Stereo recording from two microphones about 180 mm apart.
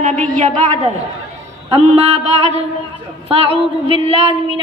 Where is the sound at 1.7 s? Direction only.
35° right (ahead or behind).